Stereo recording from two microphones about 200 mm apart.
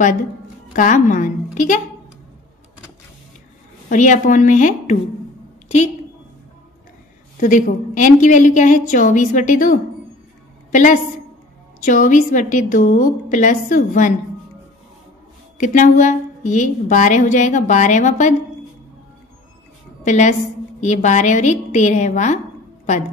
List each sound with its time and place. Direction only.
0.7 s a woman's voice: 40° left (ahead or behind)
3.9 s a woman's voice: 40° left (ahead or behind)
7.3 s a woman's voice: 40° left (ahead or behind)
15.5 s a woman's voice: 40° left (ahead or behind)
20.0 s a woman's voice: 35° left (ahead or behind)